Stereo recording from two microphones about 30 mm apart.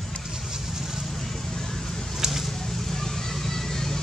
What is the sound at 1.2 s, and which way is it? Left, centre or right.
Vehicle, centre.